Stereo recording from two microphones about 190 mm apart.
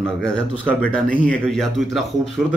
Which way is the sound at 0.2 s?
5° left (ahead or behind).